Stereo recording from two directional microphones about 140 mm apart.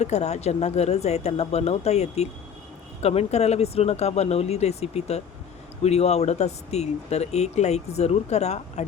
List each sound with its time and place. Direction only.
0.0 s speech: 55° left (ahead or behind)